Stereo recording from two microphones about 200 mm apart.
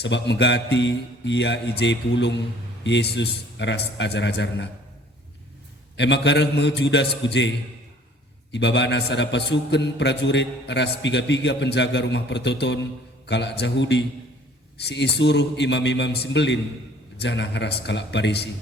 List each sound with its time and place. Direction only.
0.0 s a man's voice: 60° left (ahead or behind)
6.0 s a man's voice: 60° left (ahead or behind)
8.5 s a man's voice: 60° left (ahead or behind)